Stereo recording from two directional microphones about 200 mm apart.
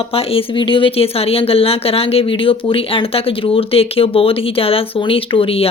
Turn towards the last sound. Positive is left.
turn(degrees=30)  # may be behind; listen again after turning